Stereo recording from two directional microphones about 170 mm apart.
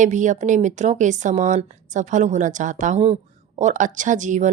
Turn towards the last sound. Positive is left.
turn(degrees=-45)  # may be behind; listen again after turning